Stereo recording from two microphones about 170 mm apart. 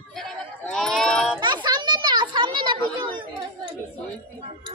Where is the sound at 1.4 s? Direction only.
25° right (ahead or behind).